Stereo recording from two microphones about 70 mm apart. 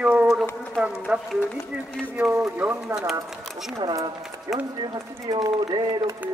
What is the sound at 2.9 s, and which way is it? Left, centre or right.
Speech, right.